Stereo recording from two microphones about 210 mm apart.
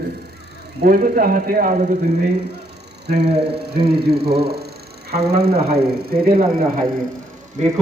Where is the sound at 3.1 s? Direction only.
50° right (ahead or behind).